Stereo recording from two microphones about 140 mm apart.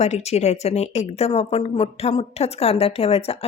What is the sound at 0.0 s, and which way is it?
A woman's voice, 50° left (ahead or behind).